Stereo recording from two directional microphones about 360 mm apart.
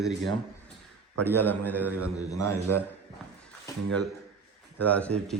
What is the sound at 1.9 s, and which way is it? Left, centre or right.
Speech, right.